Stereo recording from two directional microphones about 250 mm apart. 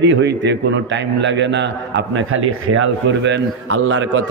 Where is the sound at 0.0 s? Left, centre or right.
Right.